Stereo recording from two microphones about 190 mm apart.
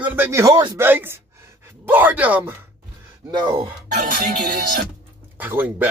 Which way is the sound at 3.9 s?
45° right (ahead or behind).